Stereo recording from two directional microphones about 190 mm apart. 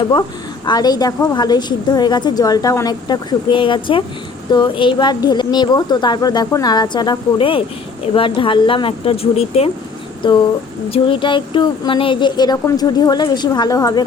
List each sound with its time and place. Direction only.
0.1 s a woman's voice: 20° left (ahead or behind)
10.9 s a woman's voice: 25° left (ahead or behind)